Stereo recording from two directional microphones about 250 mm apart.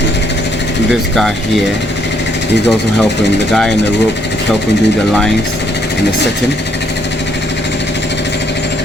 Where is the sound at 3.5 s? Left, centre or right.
Centre.